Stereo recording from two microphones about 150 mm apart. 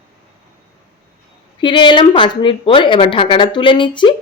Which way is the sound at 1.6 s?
30° left (ahead or behind).